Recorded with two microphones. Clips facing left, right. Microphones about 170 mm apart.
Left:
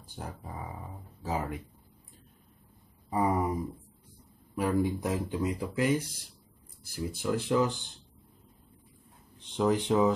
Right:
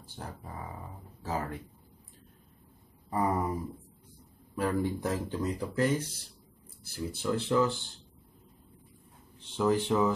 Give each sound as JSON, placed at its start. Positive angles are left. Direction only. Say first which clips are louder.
{"t": 1.2, "sound": "speech", "louder": "left 1 dB", "side_deg": 15}
{"t": 3.1, "sound": "a sound", "louder": "left 2 dB", "side_deg": 15}
{"t": 4.6, "sound": "speech", "louder": "left 2 dB", "side_deg": 15}
{"t": 9.4, "sound": "speech", "louder": "even", "side_deg": 15}